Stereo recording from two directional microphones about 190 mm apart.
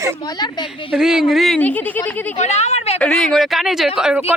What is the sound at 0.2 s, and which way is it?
Speech, 20° left (ahead or behind).